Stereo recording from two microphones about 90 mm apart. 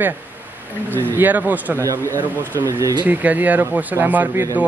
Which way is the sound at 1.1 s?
20° right (ahead or behind).